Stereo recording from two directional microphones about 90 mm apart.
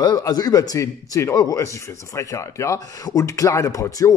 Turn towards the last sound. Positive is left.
turn(degrees=40)  # may be behind; listen again after turning